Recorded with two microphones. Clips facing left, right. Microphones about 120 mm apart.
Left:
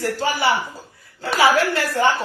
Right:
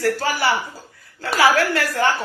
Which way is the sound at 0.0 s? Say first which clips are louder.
Right 1 dB; 20° left (ahead or behind).